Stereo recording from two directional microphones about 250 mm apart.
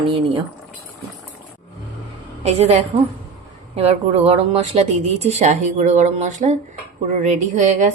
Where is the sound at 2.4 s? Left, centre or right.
Right.